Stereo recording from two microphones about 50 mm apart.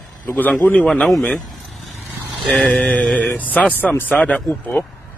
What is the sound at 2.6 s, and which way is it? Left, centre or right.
A man's voice, left.